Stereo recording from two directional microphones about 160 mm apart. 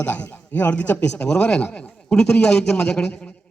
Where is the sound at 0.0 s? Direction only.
10° left (ahead or behind).